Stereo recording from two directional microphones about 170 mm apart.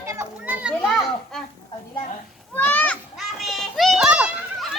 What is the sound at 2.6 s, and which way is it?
Children playing, 10° left (ahead or behind).